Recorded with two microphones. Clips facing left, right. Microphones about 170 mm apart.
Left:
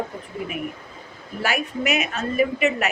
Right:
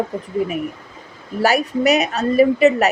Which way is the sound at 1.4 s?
40° right (ahead or behind).